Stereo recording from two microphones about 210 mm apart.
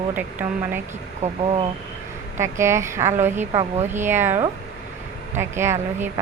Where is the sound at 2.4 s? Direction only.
15° right (ahead or behind).